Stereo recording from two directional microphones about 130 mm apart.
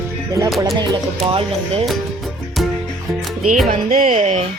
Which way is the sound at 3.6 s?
90° right.